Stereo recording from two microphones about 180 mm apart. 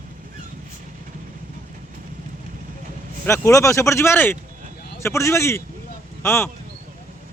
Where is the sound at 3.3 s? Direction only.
15° left (ahead or behind).